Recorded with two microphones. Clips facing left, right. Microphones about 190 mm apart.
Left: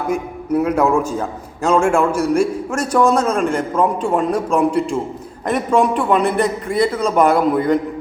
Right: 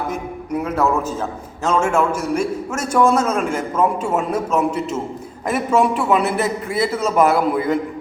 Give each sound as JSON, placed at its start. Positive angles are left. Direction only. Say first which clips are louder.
{"t": 0.1, "sound": "a man's voice", "louder": "left 5 dB", "side_deg": 0}
{"t": 1.8, "sound": "a man's voice", "louder": "left 3 dB", "side_deg": -5}